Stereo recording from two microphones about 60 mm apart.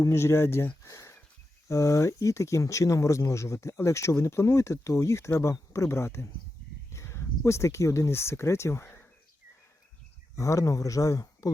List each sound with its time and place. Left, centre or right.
0.0 s speech: left
0.8 s a sound: left
1.6 s speech: left
10.3 s speech: left